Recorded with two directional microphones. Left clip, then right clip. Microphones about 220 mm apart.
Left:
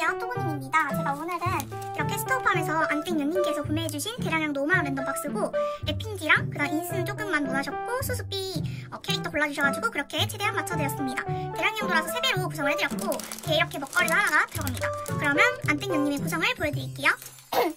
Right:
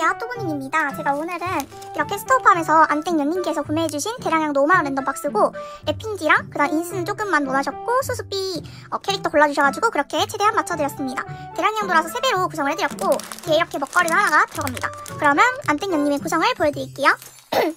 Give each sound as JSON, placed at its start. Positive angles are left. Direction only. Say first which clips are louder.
{"t": 2.0, "sound": "speech", "louder": "right 9 dB", "side_deg": -10}